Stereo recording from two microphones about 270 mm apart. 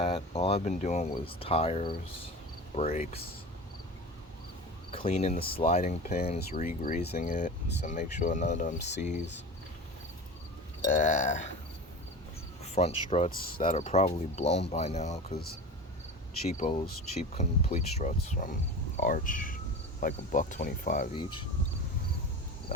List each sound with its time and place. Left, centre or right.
0.0 s speech: left
4.9 s speech: left
6.8 s speech: left
8.8 s speech: left
10.8 s speech: left
12.6 s speech: left